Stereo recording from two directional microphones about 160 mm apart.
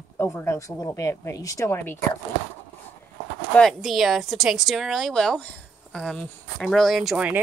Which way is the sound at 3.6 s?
Centre (ahead or behind).